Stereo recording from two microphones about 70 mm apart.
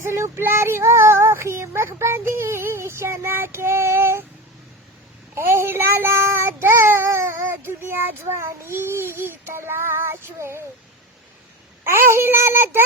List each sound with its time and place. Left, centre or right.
0.0 s child singing: right
5.3 s child singing: right
11.9 s child singing: right